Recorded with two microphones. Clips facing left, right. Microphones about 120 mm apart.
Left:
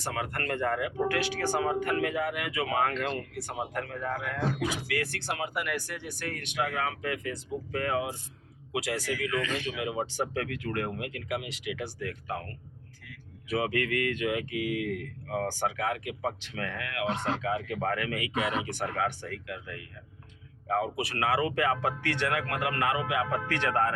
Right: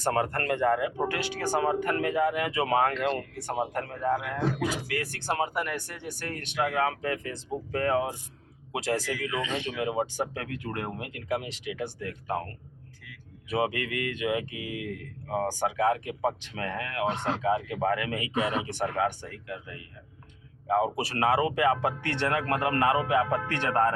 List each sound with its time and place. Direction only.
0.0 s speech: 40° right (ahead or behind)
0.5 s speech: 20° right (ahead or behind); by 9.0 s 35° right (ahead or behind)
9.2 s speech: 20° right (ahead or behind)
13.6 s speech: 20° right (ahead or behind)
17.7 s speech: 20° right (ahead or behind)